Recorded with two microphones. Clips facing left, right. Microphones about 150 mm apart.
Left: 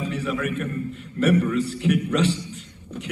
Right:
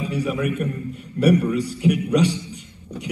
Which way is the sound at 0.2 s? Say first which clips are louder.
Right 6 dB; 10° right (ahead or behind).